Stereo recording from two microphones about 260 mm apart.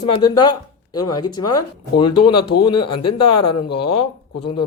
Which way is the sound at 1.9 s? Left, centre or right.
Left.